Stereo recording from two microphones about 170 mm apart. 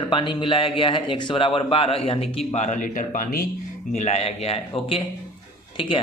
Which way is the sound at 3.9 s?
40° left (ahead or behind).